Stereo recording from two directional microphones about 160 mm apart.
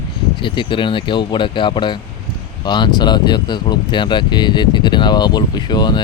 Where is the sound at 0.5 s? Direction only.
30° left (ahead or behind).